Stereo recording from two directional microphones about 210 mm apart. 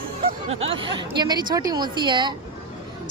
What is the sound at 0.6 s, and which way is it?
Speech, 25° right (ahead or behind).